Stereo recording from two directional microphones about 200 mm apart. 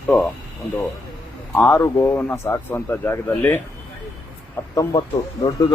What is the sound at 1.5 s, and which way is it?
Speech, 10° left (ahead or behind).